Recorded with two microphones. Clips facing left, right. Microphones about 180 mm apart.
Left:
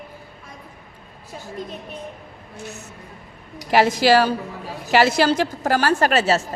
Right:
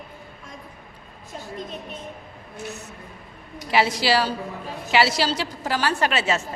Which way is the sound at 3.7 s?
45° left (ahead or behind).